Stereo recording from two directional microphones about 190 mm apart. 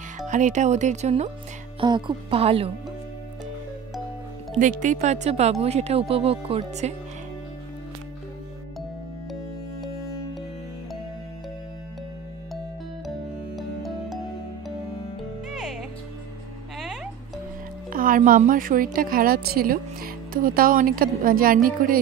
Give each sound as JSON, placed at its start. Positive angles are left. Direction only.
{"t": 0.3, "sound": "speech", "side_deg": -40}
{"t": 1.8, "sound": "speech", "side_deg": -25}
{"t": 4.6, "sound": "speech", "side_deg": -40}
{"t": 13.6, "sound": "music", "side_deg": 0}
{"t": 15.5, "sound": "music", "side_deg": 0}
{"t": 17.8, "sound": "a woman's voice", "side_deg": -45}